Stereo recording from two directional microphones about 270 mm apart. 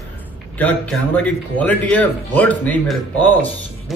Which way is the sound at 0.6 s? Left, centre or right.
Centre.